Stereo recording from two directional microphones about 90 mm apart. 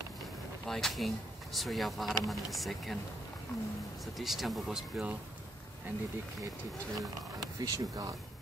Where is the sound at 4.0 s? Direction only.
Centre (ahead or behind).